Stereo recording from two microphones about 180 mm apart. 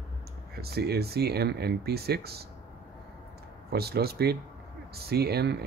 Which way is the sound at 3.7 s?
60° right (ahead or behind).